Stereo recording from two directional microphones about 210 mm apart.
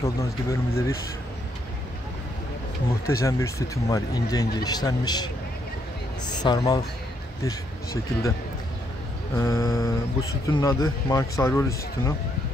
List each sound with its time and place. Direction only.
0.0 s speech: 15° left (ahead or behind)
3.1 s speech: 15° left (ahead or behind)
9.3 s speech: 15° left (ahead or behind)